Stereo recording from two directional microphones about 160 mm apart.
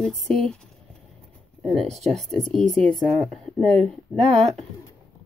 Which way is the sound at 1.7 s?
Centre (ahead or behind).